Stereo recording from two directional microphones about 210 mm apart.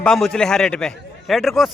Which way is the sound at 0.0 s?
Centre (ahead or behind).